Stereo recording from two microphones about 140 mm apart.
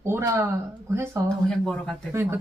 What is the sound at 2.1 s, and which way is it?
Speech, 15° right (ahead or behind).